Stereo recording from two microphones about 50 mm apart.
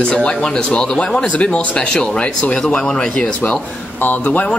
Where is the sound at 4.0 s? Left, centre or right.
Left.